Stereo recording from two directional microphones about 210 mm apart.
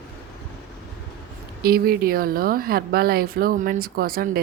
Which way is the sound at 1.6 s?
45° right (ahead or behind).